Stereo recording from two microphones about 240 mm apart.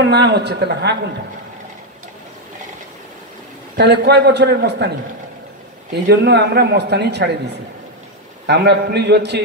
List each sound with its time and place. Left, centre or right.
0.0 s a man's voice: right
3.7 s a man's voice: right
6.0 s a man's voice: right